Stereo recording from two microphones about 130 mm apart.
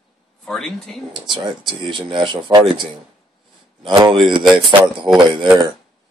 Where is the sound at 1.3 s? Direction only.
40° right (ahead or behind).